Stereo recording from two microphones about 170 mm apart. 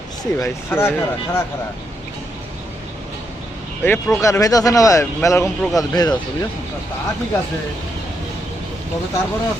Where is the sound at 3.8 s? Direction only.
15° left (ahead or behind).